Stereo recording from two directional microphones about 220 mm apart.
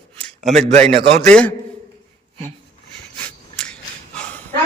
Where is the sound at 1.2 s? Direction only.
5° left (ahead or behind).